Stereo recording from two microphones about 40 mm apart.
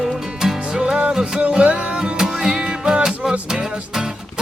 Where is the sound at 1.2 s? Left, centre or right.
Right.